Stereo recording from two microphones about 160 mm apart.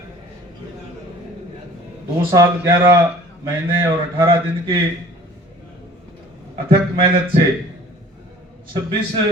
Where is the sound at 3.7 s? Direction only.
30° right (ahead or behind).